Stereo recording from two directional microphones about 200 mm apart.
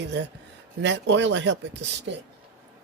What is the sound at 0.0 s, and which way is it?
Speech, 60° right (ahead or behind).